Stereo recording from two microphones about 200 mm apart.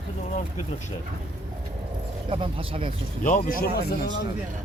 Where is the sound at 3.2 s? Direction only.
45° left (ahead or behind).